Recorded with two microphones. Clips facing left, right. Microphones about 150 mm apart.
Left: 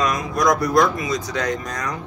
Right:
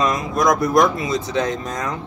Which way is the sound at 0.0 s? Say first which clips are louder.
Right 1 dB; 20° right (ahead or behind).